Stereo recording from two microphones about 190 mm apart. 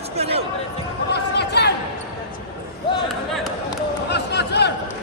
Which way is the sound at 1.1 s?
60° left (ahead or behind).